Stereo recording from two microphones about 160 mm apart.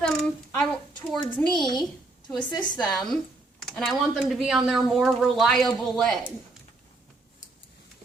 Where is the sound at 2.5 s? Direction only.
25° left (ahead or behind).